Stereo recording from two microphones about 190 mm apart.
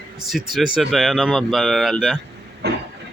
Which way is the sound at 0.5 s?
Centre (ahead or behind).